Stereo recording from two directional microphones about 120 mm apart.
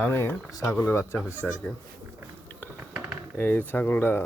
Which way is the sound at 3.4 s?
15° left (ahead or behind).